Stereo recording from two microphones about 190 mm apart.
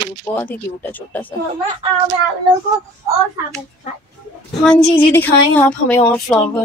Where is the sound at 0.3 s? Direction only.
15° left (ahead or behind).